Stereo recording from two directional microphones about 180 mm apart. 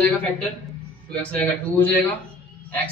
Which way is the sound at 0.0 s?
10° left (ahead or behind).